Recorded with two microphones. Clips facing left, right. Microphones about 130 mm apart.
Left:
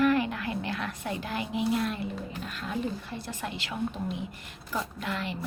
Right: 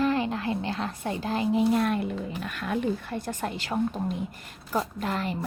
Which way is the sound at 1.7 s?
55° right (ahead or behind).